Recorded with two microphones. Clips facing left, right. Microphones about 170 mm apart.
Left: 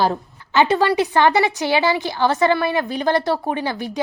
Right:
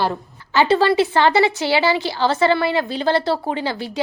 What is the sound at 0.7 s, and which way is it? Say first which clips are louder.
A woman's voice: right 2 dB; 15° left (ahead or behind).